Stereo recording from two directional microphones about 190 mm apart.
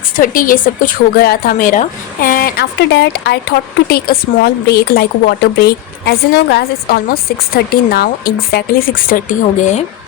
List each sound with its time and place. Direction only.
0.2 s speech: 45° left (ahead or behind)